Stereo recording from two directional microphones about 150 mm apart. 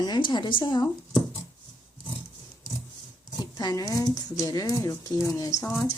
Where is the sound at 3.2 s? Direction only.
25° left (ahead or behind).